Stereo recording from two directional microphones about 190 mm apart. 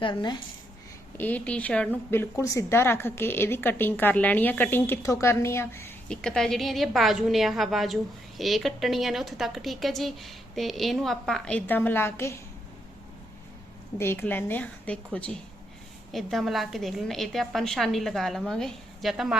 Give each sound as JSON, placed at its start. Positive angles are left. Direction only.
{"t": 0.0, "sound": "speech", "side_deg": 25}
{"t": 1.1, "sound": "a woman's voice", "side_deg": 10}
{"t": 14.0, "sound": "a woman's voice", "side_deg": 10}